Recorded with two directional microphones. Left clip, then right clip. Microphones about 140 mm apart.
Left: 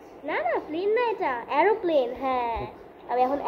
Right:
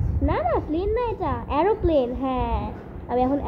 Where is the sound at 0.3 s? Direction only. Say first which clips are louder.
Right 3 dB; 60° right (ahead or behind).